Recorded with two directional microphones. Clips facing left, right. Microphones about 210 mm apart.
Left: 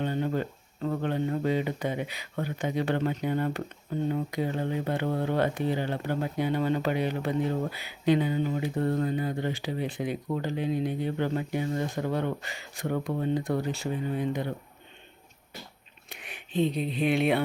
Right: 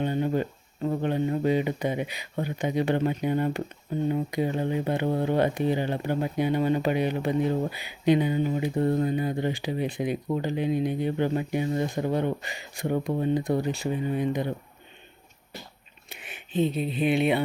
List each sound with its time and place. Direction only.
0.0 s speech: 15° right (ahead or behind)
16.0 s speech: centre (ahead or behind)